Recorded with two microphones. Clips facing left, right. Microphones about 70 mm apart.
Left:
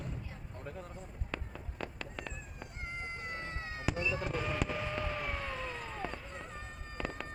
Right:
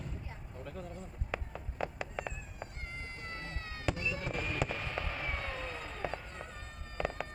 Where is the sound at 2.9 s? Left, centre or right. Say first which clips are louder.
Left 3 dB; left.